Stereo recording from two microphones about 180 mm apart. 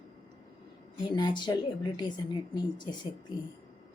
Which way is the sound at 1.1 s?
25° left (ahead or behind).